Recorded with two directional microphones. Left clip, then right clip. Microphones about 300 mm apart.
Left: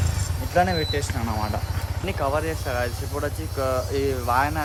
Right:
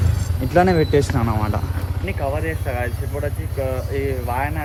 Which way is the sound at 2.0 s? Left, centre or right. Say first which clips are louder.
Even; centre.